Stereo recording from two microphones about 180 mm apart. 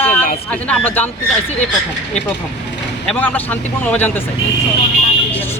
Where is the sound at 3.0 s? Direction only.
10° left (ahead or behind).